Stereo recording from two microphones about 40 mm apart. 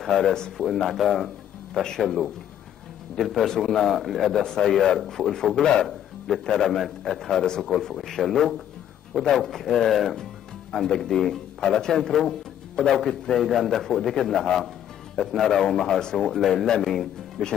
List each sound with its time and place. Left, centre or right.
0.0 s a man's voice: centre
4.4 s speech: centre
5.9 s a sound: centre
6.5 s a man's voice: centre
11.0 s a man's voice: centre